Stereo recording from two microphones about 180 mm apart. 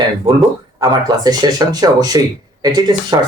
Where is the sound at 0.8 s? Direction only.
25° right (ahead or behind).